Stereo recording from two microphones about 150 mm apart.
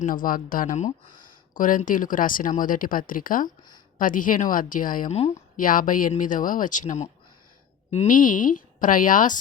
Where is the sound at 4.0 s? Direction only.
65° left (ahead or behind).